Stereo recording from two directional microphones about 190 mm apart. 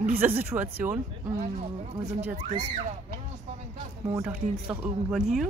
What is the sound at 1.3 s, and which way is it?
Speech, 35° right (ahead or behind).